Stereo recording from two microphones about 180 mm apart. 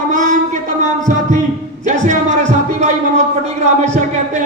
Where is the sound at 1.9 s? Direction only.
40° right (ahead or behind).